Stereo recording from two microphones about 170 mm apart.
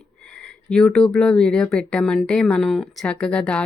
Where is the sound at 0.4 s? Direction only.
5° left (ahead or behind).